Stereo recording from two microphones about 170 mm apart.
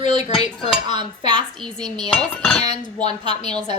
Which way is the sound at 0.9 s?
25° right (ahead or behind).